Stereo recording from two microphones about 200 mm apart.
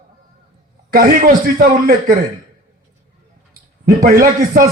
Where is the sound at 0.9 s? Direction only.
45° right (ahead or behind).